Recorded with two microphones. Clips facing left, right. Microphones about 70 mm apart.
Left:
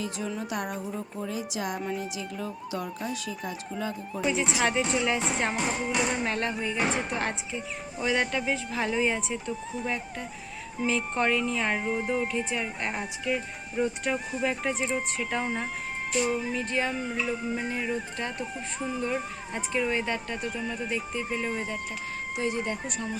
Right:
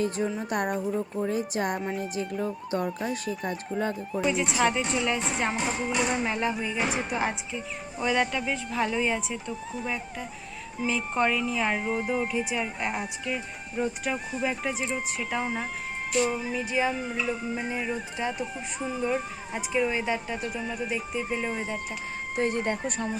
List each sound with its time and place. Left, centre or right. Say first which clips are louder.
0.2 s music: right 4 dB; right
2.4 s speech: right 5 dB; right
4.1 s music: left 1 dB; centre
22.4 s music: right 3 dB; right